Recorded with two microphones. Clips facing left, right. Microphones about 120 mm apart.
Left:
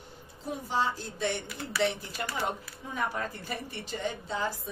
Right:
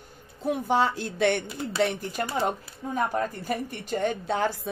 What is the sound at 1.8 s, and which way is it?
A woman's voice, 55° right (ahead or behind).